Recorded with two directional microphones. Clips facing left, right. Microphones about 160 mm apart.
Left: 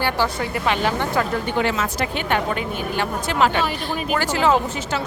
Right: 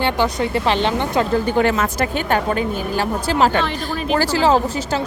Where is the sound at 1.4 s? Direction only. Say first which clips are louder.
Right 5 dB; 40° right (ahead or behind).